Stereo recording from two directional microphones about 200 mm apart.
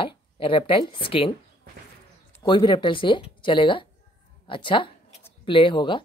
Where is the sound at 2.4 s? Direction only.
25° left (ahead or behind).